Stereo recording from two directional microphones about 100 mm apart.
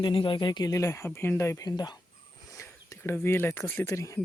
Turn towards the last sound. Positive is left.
turn(degrees=30)  # may be behind; listen again after turning